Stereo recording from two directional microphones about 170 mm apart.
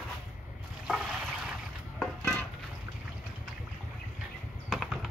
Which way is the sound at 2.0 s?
5° left (ahead or behind).